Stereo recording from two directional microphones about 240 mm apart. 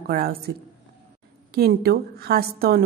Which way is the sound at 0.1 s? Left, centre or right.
Right.